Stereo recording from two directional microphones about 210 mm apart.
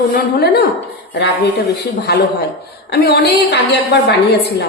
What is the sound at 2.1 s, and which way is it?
A woman's voice, 50° left (ahead or behind).